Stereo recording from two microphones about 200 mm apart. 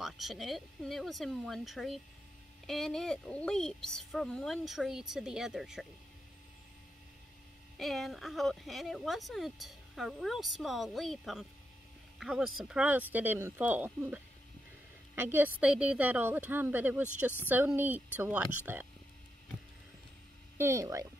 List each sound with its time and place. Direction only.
0.0 s speech: centre (ahead or behind)
7.7 s a woman's voice: centre (ahead or behind)
20.5 s a woman's voice: 15° right (ahead or behind)